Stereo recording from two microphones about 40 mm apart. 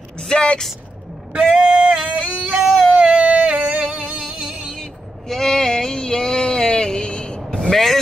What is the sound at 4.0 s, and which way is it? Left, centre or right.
Music, right.